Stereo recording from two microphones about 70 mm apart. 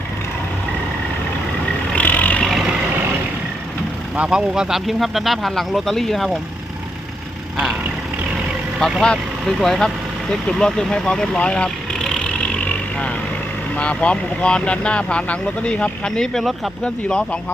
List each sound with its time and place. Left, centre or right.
2.0 s vehicle: left
2.4 s vehicle: centre
4.3 s speech: centre
8.8 s speech: centre
10.4 s vehicle: centre
13.7 s speech: centre